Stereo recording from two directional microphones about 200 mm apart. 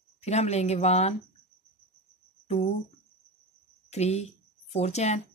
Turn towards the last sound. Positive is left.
turn(degrees=35)  # may be behind; listen again after turning